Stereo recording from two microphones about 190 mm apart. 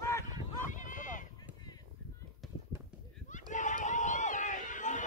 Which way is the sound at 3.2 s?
40° left (ahead or behind).